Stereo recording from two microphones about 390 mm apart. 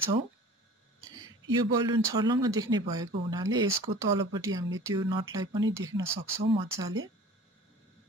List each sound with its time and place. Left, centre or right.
1.1 s speech: centre